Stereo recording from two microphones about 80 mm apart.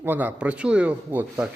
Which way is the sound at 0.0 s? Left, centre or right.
Right.